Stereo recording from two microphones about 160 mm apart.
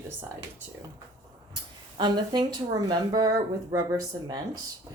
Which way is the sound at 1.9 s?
25° right (ahead or behind).